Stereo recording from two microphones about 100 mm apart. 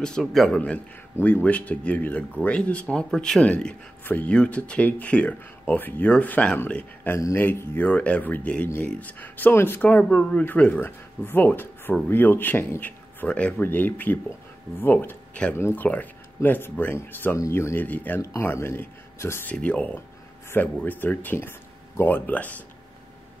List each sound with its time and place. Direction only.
0.0 s speech: 5° left (ahead or behind)
1.1 s speech: 15° left (ahead or behind)
19.5 s speech: 10° left (ahead or behind)